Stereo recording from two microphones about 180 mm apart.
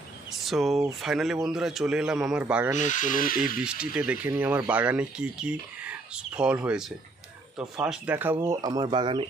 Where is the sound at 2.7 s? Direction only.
45° left (ahead or behind).